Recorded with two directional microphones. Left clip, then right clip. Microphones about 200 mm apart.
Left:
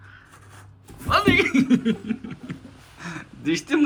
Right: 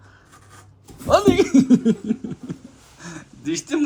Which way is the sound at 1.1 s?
30° right (ahead or behind).